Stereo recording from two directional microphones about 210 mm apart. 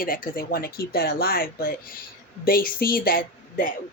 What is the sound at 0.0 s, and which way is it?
Speech, 45° left (ahead or behind).